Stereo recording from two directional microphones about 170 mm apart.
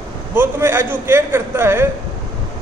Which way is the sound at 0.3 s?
15° right (ahead or behind).